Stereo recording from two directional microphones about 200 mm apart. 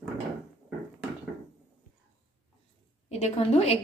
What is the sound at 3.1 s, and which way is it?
Speech, 35° left (ahead or behind).